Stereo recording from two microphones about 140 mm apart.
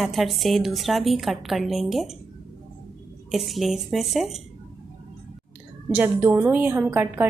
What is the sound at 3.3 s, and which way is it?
Speech, centre (ahead or behind).